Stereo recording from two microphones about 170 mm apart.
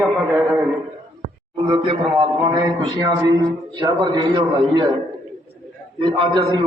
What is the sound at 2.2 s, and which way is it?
A man's voice, 25° right (ahead or behind).